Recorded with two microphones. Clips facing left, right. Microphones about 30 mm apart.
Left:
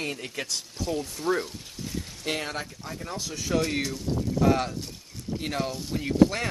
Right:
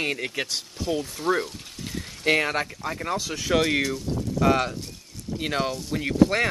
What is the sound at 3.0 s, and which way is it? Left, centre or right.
Speech, right.